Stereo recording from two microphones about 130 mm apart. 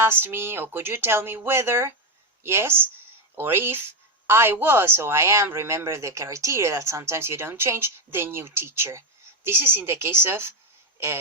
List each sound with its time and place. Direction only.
0.0 s speech: 15° right (ahead or behind)